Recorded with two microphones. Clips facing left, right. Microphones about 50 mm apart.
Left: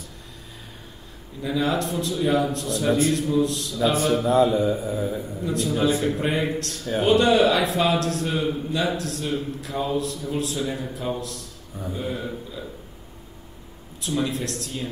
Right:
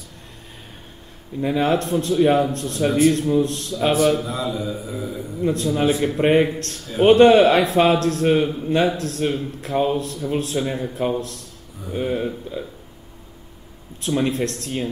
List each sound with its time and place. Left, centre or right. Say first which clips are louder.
1.4 s a man's voice: right 4 dB; right
4.2 s mantra: left 7 dB; left
5.4 s a man's voice: right 4 dB; right
14.0 s a man's voice: right 5 dB; right